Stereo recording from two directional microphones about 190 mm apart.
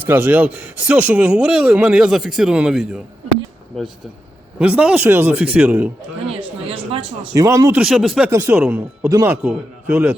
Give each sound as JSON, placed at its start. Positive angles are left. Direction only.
{"t": 0.0, "sound": "speech", "side_deg": -10}
{"t": 4.6, "sound": "speech", "side_deg": -5}
{"t": 6.7, "sound": "a sound", "side_deg": -30}
{"t": 7.3, "sound": "speech", "side_deg": -15}
{"t": 7.8, "sound": "speech", "side_deg": 0}
{"t": 8.3, "sound": "speech", "side_deg": -15}